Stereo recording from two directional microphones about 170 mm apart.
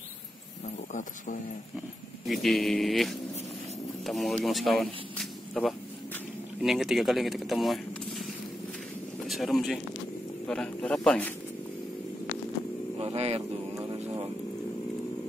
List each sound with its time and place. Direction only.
0.9 s speech: 50° left (ahead or behind)
2.2 s speech: centre (ahead or behind)
9.3 s speech: centre (ahead or behind)
13.0 s speech: 40° right (ahead or behind)